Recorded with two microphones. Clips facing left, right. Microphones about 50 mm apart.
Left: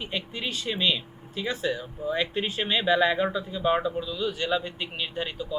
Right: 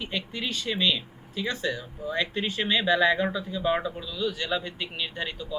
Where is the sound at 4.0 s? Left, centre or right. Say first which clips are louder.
Left 5 dB; left.